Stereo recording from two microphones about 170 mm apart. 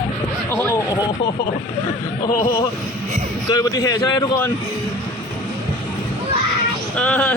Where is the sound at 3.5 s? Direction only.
20° left (ahead or behind).